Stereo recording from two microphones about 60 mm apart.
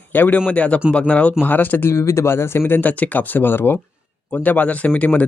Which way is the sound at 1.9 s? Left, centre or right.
Left.